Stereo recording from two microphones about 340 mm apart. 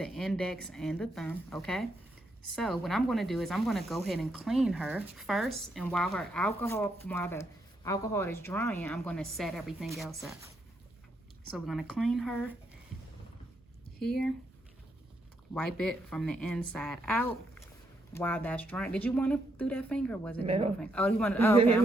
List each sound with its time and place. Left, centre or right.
0.0 s speech: centre
11.5 s speech: centre
14.0 s speech: centre
15.5 s speech: centre
20.4 s speech: centre
20.8 s speech: centre